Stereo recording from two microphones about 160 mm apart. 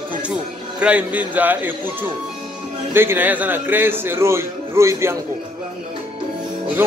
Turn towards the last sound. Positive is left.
turn(degrees=-15)  # may be behind; listen again after turning